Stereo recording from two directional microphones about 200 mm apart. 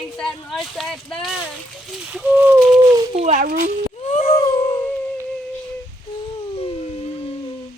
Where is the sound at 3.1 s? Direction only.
35° right (ahead or behind).